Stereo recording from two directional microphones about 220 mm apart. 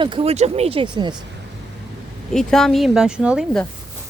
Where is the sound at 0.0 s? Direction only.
25° right (ahead or behind).